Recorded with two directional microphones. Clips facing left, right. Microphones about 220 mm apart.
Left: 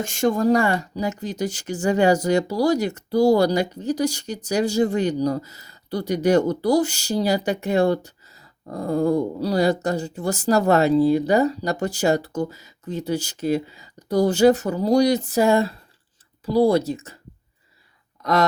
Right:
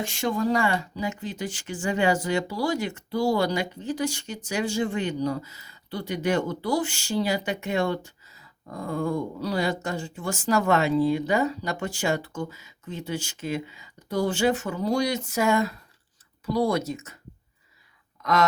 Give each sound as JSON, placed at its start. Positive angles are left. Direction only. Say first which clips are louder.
{"t": 0.0, "sound": "speech", "louder": "left 6 dB", "side_deg": 45}
{"t": 18.2, "sound": "speech", "louder": "left 3 dB", "side_deg": 35}